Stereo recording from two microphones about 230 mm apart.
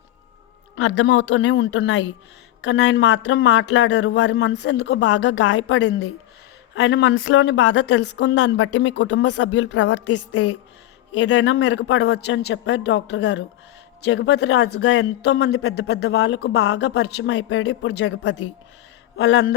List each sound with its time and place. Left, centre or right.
0.8 s speech: left
10.1 s a woman's voice: left
11.2 s speech: left